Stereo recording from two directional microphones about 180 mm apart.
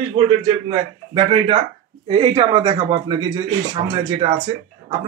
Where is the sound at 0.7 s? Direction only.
30° right (ahead or behind).